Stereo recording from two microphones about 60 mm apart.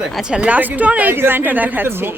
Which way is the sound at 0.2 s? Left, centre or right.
Centre.